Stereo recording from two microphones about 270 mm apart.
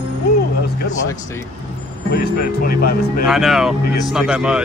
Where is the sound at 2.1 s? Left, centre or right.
Left.